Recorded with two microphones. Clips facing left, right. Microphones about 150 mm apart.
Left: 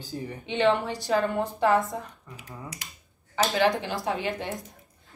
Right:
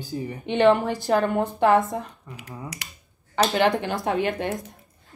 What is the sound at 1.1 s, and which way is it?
Speech, 65° right (ahead or behind).